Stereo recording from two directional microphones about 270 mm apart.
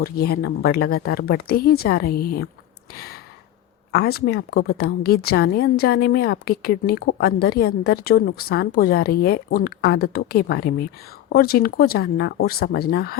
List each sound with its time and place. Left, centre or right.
0.0 s a woman's voice: left
2.9 s a sound: left
3.9 s a woman's voice: left